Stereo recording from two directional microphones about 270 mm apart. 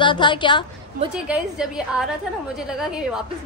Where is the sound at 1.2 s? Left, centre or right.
Centre.